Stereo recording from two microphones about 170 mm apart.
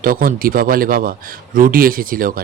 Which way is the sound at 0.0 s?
55° right (ahead or behind).